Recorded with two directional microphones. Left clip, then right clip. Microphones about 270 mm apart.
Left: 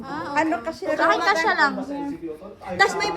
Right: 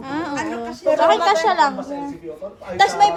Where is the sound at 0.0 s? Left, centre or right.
Right.